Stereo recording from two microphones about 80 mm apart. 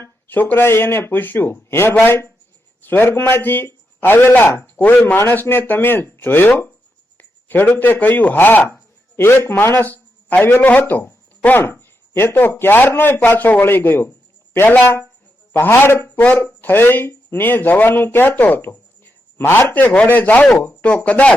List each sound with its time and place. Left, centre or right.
0.0 s speech: left
5.1 s a man's voice: left